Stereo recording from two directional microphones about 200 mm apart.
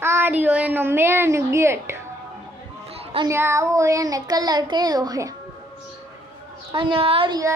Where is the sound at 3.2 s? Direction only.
15° right (ahead or behind).